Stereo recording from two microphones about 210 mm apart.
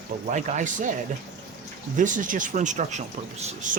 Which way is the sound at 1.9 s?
40° right (ahead or behind).